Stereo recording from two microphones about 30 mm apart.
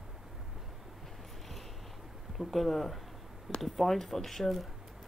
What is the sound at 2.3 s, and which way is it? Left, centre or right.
Speech, centre.